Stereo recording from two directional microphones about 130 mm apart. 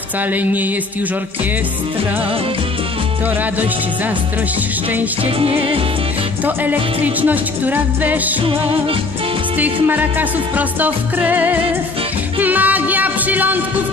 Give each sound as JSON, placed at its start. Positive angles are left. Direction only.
{"t": 0.3, "sound": "music", "side_deg": -15}
{"t": 5.2, "sound": "music", "side_deg": -45}
{"t": 6.4, "sound": "music", "side_deg": -15}
{"t": 9.8, "sound": "music", "side_deg": -15}